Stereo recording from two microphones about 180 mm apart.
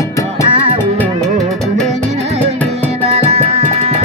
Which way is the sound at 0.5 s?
30° right (ahead or behind).